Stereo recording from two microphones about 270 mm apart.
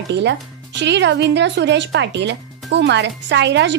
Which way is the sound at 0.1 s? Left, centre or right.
Right.